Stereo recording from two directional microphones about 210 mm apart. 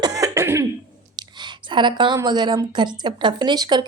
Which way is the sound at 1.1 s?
20° right (ahead or behind).